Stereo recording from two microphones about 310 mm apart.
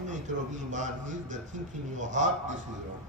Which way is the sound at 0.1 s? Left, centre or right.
Right.